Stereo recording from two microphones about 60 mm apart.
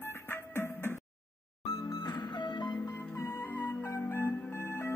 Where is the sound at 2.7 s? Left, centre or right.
Left.